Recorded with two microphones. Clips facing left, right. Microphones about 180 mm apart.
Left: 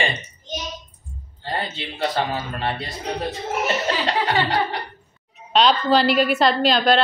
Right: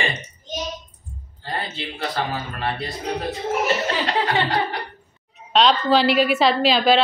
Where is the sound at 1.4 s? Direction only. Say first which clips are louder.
Left 2 dB; 25° left (ahead or behind).